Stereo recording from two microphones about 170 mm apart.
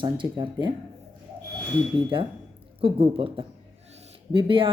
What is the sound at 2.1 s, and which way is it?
A woman's voice, 30° right (ahead or behind).